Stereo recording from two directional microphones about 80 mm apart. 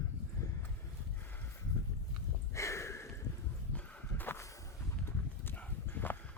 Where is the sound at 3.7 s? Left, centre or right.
Left.